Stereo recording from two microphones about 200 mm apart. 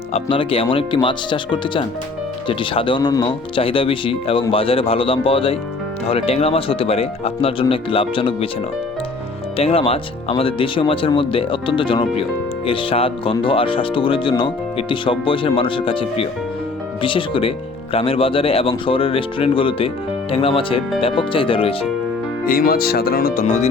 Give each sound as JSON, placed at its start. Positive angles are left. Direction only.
{"t": 0.1, "sound": "speech", "side_deg": 25}
{"t": 9.6, "sound": "speech", "side_deg": 30}
{"t": 22.4, "sound": "speech", "side_deg": 45}